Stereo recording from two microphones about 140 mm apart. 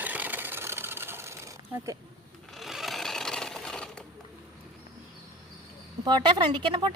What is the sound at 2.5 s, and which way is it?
Sewing machine, centre (ahead or behind).